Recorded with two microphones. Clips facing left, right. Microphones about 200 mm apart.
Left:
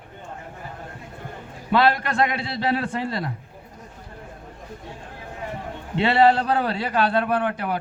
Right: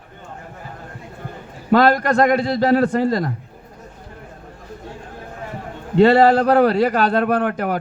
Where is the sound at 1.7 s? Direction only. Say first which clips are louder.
Right 6 dB; 40° right (ahead or behind).